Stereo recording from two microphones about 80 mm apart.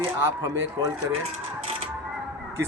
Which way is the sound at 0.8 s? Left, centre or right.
Right.